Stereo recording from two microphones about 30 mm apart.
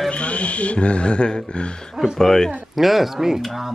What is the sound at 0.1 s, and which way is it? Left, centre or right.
Speech, left.